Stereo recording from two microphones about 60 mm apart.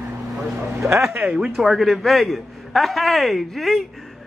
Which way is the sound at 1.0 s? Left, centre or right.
Centre.